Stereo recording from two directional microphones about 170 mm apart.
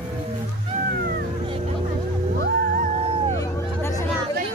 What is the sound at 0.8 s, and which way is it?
Music, 65° right (ahead or behind).